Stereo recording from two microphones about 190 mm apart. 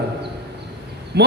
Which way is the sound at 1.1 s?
60° right (ahead or behind).